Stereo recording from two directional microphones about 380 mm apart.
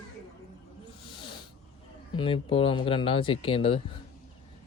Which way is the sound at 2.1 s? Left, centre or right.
Centre.